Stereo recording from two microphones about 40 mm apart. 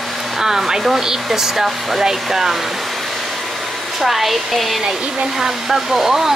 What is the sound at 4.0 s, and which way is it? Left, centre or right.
Speech, centre.